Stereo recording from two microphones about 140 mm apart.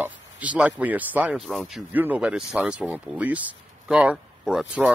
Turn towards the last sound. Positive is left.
turn(degrees=-5)  # may be behind; listen again after turning